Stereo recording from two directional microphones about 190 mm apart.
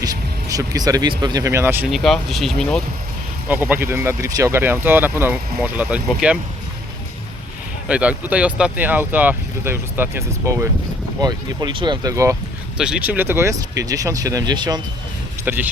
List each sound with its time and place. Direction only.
0.0 s music: 20° right (ahead or behind)
1.2 s speech: 20° right (ahead or behind); by 2.8 s 5° left (ahead or behind)
3.5 s speech: 10° right (ahead or behind)
7.9 s speech: 5° right (ahead or behind)
12.7 s speech: 5° right (ahead or behind); by 14.8 s 20° right (ahead or behind)
15.4 s speech: 10° right (ahead or behind)